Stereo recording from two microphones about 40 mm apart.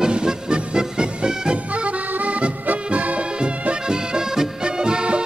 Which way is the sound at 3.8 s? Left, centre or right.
Centre.